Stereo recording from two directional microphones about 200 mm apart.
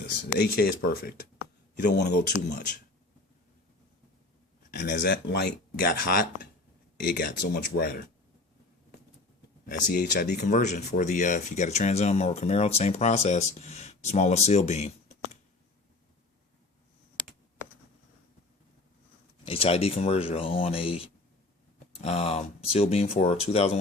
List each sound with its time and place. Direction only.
0.0 s speech: 50° left (ahead or behind)
4.7 s speech: 55° left (ahead or behind)
9.6 s speech: 45° left (ahead or behind)
10.4 s speech: 35° left (ahead or behind)
19.5 s speech: 30° left (ahead or behind)